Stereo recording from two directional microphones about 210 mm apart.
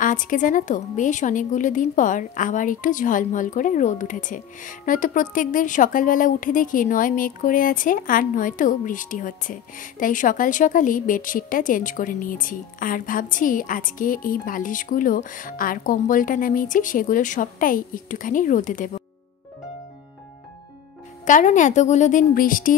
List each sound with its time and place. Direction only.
0.0 s a woman's voice: 40° left (ahead or behind)
21.3 s a woman's voice: 35° left (ahead or behind)